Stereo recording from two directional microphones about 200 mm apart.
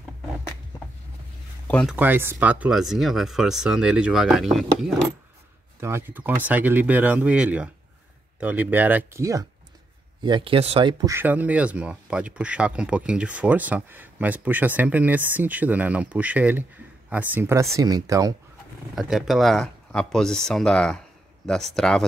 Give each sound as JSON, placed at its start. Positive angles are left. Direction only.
{"t": 1.7, "sound": "speech", "side_deg": 5}
{"t": 2.0, "sound": "speech", "side_deg": -10}
{"t": 5.8, "sound": "speech", "side_deg": -10}
{"t": 18.9, "sound": "speech", "side_deg": 0}